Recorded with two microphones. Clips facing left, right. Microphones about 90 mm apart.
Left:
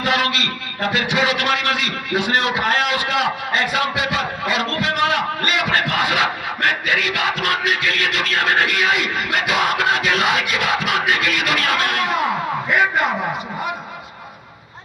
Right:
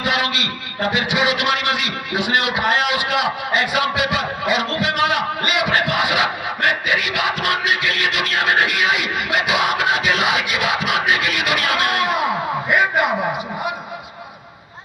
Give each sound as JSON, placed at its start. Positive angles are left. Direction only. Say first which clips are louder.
{"t": 0.0, "sound": "speech", "louder": "left 1 dB", "side_deg": -15}